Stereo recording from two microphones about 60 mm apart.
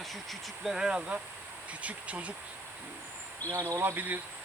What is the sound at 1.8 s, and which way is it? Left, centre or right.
Speech, right.